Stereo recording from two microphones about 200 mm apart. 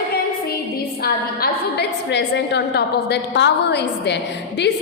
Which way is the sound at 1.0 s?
55° left (ahead or behind).